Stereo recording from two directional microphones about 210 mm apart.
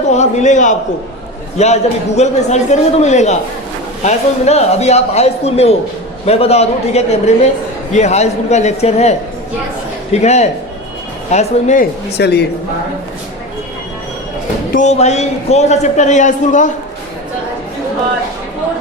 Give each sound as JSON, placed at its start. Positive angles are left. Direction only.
{"t": 0.1, "sound": "a man's voice", "side_deg": 35}
{"t": 12.1, "sound": "speech", "side_deg": 50}
{"t": 14.7, "sound": "a man's voice", "side_deg": 35}